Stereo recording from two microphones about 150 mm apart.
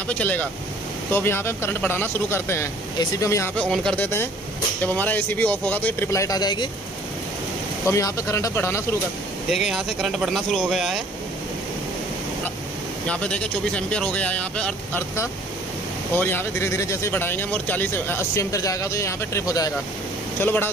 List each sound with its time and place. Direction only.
0.1 s speech: 10° left (ahead or behind)
3.5 s speech: 5° left (ahead or behind); by 6.7 s 30° left (ahead or behind)
7.8 s speech: 20° left (ahead or behind)
9.5 s speech: 5° right (ahead or behind)
13.1 s speech: 10° left (ahead or behind)